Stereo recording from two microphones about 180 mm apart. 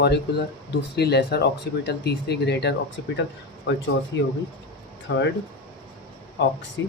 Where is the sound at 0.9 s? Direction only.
65° left (ahead or behind).